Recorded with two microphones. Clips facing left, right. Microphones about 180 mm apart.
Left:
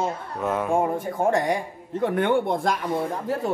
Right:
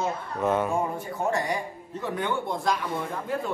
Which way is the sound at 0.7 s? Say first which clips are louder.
Left 5 dB; 50° left (ahead or behind).